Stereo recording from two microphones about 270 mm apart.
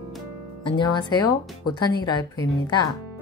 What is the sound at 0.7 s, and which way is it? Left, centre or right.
Speech, centre.